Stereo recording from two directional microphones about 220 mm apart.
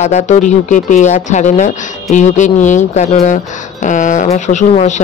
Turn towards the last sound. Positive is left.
turn(degrees=30)  # may be behind; listen again after turning